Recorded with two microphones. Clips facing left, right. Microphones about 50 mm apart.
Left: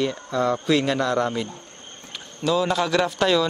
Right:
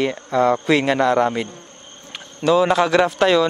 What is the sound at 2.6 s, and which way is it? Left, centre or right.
Speech, right.